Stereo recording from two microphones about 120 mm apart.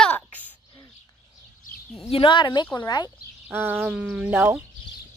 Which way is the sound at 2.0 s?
50° left (ahead or behind).